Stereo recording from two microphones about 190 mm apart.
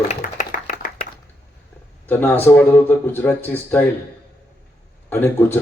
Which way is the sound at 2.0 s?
10° left (ahead or behind).